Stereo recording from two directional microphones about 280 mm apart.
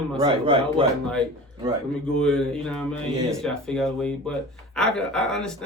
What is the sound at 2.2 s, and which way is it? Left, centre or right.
Speech, centre.